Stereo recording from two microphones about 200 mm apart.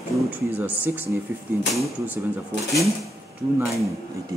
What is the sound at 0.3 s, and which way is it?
Speech, 10° right (ahead or behind).